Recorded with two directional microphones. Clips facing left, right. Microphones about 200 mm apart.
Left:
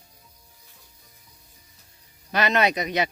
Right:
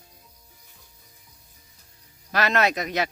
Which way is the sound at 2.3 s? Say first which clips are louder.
Left 1 dB; centre (ahead or behind).